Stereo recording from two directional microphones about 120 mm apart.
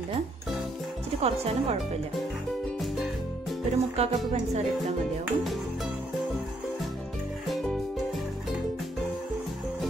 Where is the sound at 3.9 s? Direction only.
65° right (ahead or behind).